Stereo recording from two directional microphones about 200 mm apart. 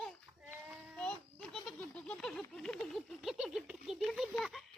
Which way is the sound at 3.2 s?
Centre (ahead or behind).